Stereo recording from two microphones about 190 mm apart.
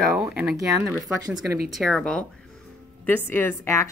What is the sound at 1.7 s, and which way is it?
Speech, centre (ahead or behind).